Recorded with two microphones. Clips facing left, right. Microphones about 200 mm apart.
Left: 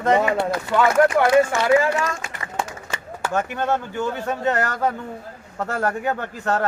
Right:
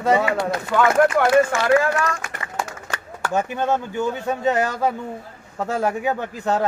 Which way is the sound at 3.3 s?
15° right (ahead or behind).